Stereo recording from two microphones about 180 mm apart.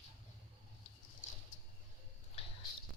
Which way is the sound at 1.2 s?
45° left (ahead or behind).